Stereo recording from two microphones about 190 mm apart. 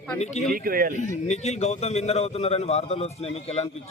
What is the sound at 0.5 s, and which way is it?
Speech, 50° right (ahead or behind).